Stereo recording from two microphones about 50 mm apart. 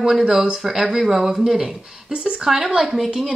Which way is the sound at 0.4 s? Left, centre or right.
Centre.